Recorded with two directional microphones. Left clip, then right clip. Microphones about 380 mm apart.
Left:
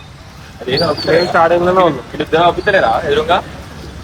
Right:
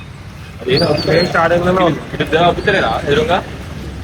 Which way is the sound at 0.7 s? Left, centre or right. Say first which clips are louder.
Even; left.